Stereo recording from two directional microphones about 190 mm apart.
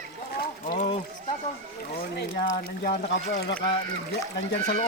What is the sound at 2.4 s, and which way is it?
Speech, 45° left (ahead or behind).